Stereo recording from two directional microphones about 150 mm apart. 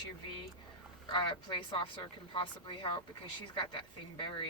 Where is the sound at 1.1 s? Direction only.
35° left (ahead or behind).